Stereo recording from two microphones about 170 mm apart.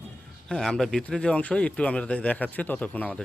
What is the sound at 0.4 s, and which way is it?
A man's voice, 5° left (ahead or behind).